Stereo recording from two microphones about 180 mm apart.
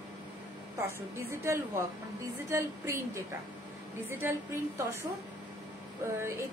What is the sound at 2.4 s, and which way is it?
Speech, 15° right (ahead or behind).